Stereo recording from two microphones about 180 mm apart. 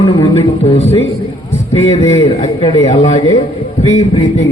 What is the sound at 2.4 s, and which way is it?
Music, 35° left (ahead or behind).